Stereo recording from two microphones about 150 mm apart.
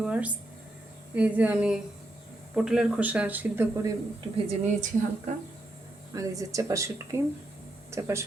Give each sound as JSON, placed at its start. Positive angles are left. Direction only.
{"t": 0.0, "sound": "a sound", "side_deg": -10}
{"t": 1.1, "sound": "speech", "side_deg": -10}
{"t": 4.4, "sound": "a woman's voice", "side_deg": -55}
{"t": 6.1, "sound": "speech", "side_deg": -20}